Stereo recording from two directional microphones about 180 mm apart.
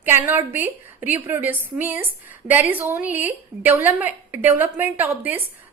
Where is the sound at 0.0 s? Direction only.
10° right (ahead or behind).